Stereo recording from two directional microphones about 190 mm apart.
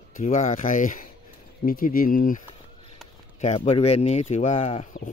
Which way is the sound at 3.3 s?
35° left (ahead or behind).